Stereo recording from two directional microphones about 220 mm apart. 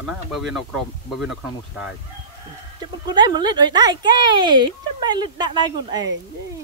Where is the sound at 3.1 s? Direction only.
20° right (ahead or behind).